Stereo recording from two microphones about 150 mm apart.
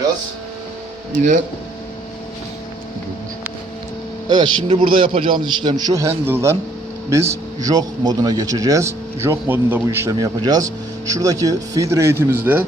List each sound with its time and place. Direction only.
1.1 s speech: 60° right (ahead or behind)
4.3 s a man's voice: 30° right (ahead or behind); by 12.6 s 15° right (ahead or behind)